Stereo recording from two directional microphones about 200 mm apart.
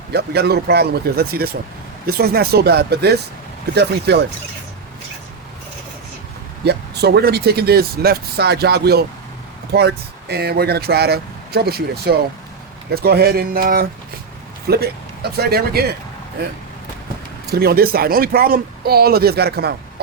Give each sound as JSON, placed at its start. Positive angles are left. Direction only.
{"t": 0.1, "sound": "speech", "side_deg": -55}
{"t": 6.7, "sound": "speech", "side_deg": -55}
{"t": 17.4, "sound": "speech", "side_deg": -50}